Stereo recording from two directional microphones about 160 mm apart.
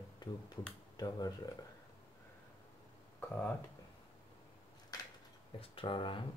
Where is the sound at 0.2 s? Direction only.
25° left (ahead or behind).